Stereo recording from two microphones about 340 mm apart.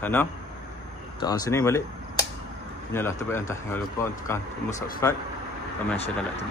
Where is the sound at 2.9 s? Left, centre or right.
Centre.